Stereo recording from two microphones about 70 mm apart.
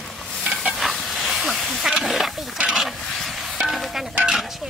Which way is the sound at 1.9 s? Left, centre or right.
Centre.